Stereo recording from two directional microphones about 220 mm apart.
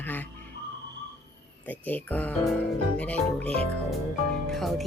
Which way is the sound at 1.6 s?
5° left (ahead or behind).